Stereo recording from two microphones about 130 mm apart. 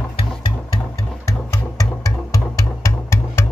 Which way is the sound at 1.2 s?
25° left (ahead or behind).